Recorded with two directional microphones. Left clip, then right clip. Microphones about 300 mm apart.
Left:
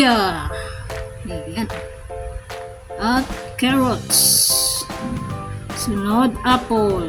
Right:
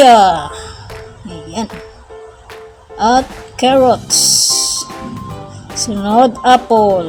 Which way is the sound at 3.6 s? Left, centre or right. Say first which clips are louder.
Right 10 dB; left.